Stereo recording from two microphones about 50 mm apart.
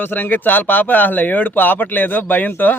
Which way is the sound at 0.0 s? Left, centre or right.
Left.